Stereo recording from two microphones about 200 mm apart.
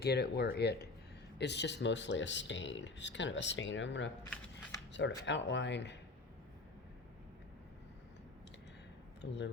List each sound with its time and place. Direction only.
0.0 s speech: 55° left (ahead or behind)
4.2 s a sound: 15° left (ahead or behind)
4.9 s speech: 65° left (ahead or behind)
9.2 s speech: 60° left (ahead or behind)